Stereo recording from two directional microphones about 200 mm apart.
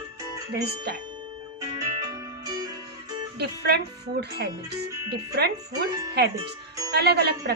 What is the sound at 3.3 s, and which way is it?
Speech, 55° right (ahead or behind).